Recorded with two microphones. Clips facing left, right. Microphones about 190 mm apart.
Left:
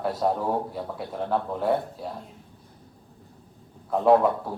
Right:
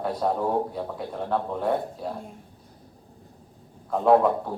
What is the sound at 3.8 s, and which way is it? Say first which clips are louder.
Speech: even; 5° left (ahead or behind).